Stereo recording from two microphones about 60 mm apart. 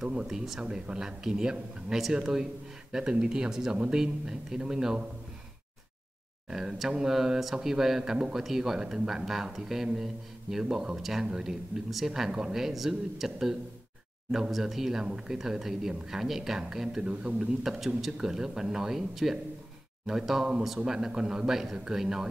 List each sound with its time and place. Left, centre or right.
0.0 s speech: centre
6.5 s speech: centre
17.6 s speech: centre